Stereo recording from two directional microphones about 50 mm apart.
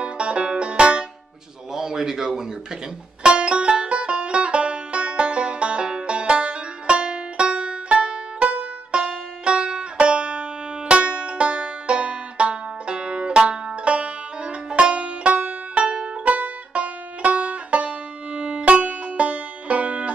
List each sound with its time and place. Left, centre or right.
0.0 s banjo: right
1.7 s speech: centre
3.2 s music: right